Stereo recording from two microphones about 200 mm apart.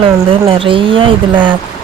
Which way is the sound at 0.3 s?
25° right (ahead or behind).